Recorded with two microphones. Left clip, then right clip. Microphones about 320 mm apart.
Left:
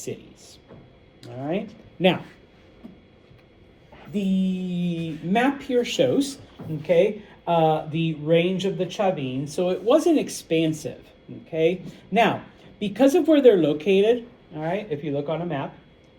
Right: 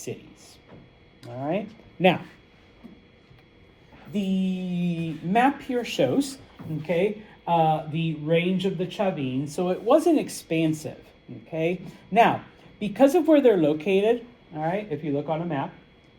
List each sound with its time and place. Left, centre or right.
0.0 s speech: centre
4.3 s a woman's voice: right
6.8 s a woman's voice: centre